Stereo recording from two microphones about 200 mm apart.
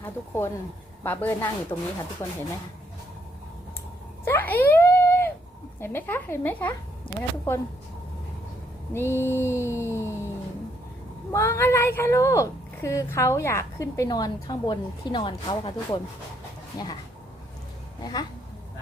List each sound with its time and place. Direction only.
0.0 s a woman's voice: 10° left (ahead or behind)
4.3 s a sound: 10° left (ahead or behind)
5.8 s a woman's voice: 10° left (ahead or behind)
8.9 s a woman's voice: 10° left (ahead or behind)
9.6 s music: 10° right (ahead or behind)
11.3 s a woman's voice: 15° left (ahead or behind)